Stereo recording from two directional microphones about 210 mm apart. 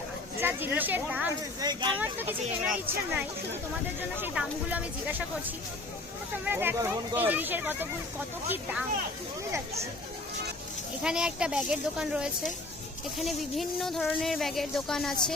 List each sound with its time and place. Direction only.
0.3 s speech: 10° right (ahead or behind)
1.6 s speech: 20° right (ahead or behind)
2.0 s speech: 10° right (ahead or behind)
6.4 s speech: 10° right (ahead or behind)
11.0 s speech: 5° right (ahead or behind)